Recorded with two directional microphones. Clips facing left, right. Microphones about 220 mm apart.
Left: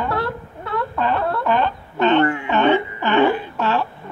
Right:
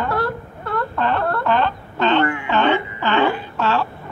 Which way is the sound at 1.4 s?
15° left (ahead or behind).